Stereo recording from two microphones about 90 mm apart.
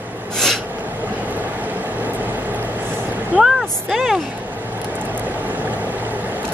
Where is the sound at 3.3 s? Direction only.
5° right (ahead or behind).